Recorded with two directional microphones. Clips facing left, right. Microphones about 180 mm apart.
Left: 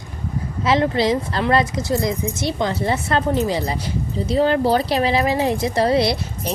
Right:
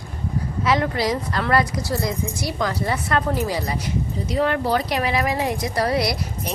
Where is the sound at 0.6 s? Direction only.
25° left (ahead or behind).